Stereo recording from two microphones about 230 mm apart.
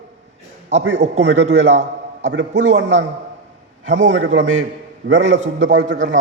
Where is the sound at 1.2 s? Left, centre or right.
Right.